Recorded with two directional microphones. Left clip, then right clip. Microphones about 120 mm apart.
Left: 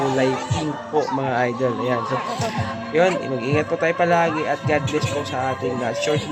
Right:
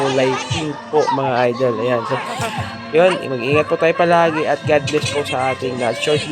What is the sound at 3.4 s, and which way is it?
Speech, 30° right (ahead or behind).